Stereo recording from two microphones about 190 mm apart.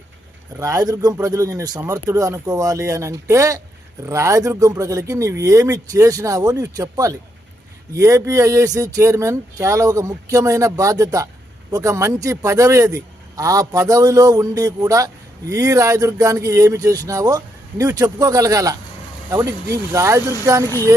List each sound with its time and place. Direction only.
0.6 s speech: 20° right (ahead or behind)
19.9 s speech: 15° right (ahead or behind)